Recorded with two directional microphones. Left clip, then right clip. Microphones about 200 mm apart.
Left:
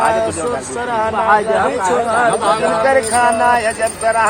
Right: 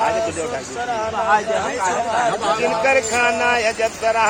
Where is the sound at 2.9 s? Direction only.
20° right (ahead or behind).